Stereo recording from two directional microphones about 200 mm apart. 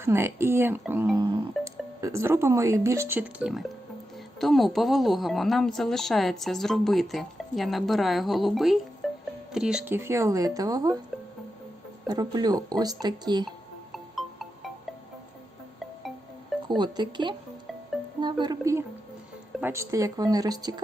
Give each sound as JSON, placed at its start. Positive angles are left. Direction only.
{"t": 0.0, "sound": "a woman's voice", "side_deg": -10}
{"t": 9.0, "sound": "music", "side_deg": 0}
{"t": 9.5, "sound": "speech", "side_deg": -5}
{"t": 12.0, "sound": "speech", "side_deg": -20}
{"t": 13.9, "sound": "music", "side_deg": 0}
{"t": 16.6, "sound": "speech", "side_deg": -20}